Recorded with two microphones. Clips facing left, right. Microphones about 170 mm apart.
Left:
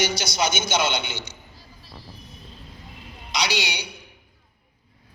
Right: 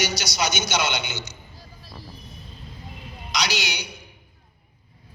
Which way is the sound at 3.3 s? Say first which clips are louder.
Left 1 dB; 30° left (ahead or behind).